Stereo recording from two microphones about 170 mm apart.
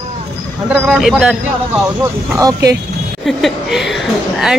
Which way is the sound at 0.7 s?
5° right (ahead or behind).